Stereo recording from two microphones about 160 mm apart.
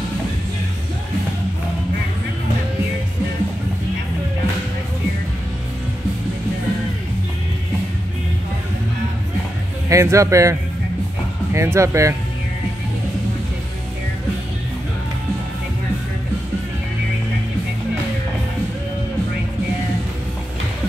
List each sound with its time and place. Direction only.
9.8 s speech: 20° right (ahead or behind)
11.5 s speech: 15° right (ahead or behind)